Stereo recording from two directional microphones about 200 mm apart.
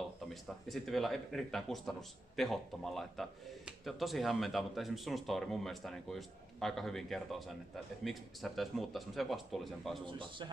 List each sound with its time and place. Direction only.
0.3 s speech: centre (ahead or behind)
10.0 s a man's voice: 25° right (ahead or behind)